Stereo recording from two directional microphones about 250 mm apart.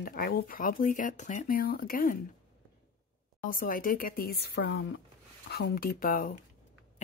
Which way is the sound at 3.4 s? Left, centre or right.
Left.